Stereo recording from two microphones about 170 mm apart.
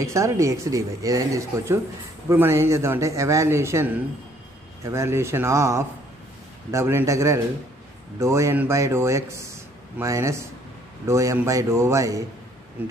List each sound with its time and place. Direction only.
0.0 s a man's voice: 15° right (ahead or behind)